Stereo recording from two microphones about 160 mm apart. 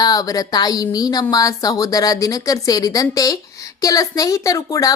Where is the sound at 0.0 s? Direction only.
25° left (ahead or behind).